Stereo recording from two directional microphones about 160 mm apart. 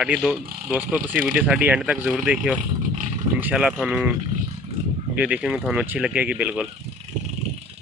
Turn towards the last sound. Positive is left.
turn(degrees=-5)  # may be behind; listen again after turning